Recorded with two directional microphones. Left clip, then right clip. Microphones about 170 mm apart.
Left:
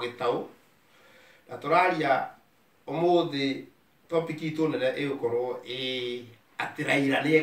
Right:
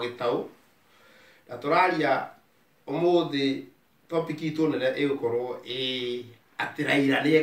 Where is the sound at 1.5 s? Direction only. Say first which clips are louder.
Right 1 dB; centre (ahead or behind).